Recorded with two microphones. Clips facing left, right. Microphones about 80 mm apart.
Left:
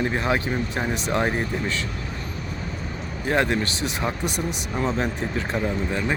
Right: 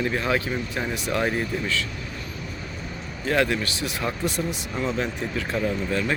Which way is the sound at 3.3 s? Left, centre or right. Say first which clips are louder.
Left 1 dB; left.